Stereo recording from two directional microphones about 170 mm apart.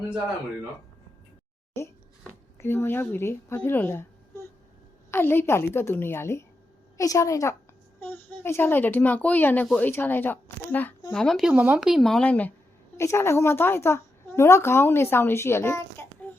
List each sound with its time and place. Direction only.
2.6 s speech: 15° left (ahead or behind)
5.1 s a woman's voice: 15° left (ahead or behind)